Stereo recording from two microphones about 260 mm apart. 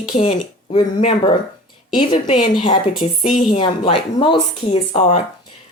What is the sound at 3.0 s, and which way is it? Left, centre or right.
Speech, left.